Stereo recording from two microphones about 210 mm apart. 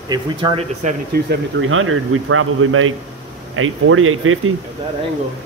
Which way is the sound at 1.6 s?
75° right (ahead or behind).